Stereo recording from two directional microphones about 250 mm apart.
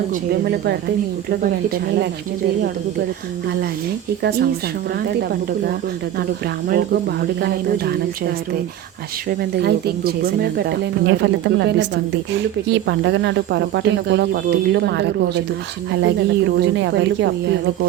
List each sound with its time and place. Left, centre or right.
0.1 s speech: right
4.2 s speech: right
6.7 s speech: right
9.4 s speech: right